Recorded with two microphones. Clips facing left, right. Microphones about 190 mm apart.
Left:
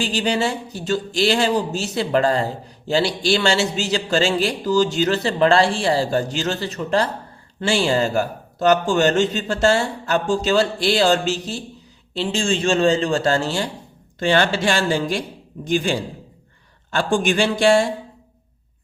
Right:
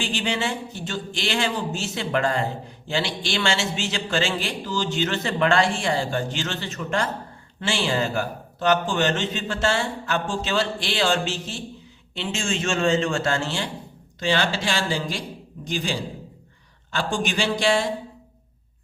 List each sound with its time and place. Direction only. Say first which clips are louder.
0.0 s speech: left 5 dB; 40° left (ahead or behind)
14.2 s speech: left 5 dB; 55° left (ahead or behind)